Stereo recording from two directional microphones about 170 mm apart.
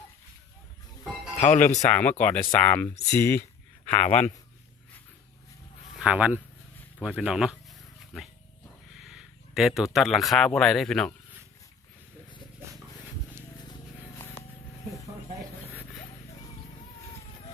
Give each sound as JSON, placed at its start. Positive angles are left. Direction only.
{"t": 1.4, "sound": "speech", "side_deg": 45}
{"t": 1.9, "sound": "speech", "side_deg": 10}
{"t": 3.9, "sound": "speech", "side_deg": 45}
{"t": 6.0, "sound": "speech", "side_deg": -10}
{"t": 9.0, "sound": "speech", "side_deg": -5}